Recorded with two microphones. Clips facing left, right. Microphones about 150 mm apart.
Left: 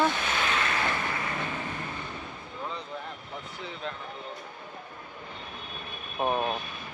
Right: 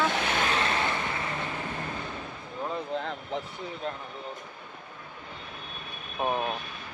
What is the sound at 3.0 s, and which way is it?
Vehicle, 90° right.